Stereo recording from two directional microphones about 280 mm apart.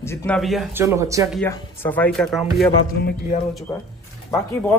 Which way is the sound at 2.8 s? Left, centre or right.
Left.